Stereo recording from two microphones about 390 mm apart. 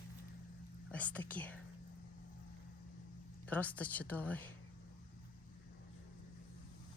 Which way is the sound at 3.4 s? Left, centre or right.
Centre.